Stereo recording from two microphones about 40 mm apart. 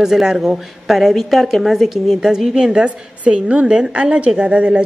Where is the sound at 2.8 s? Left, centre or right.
Right.